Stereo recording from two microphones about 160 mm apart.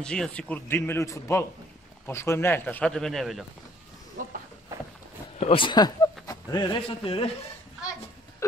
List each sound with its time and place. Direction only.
0.0 s a man's voice: 5° left (ahead or behind)
4.2 s a sound: 60° right (ahead or behind)
5.4 s speech: 35° left (ahead or behind)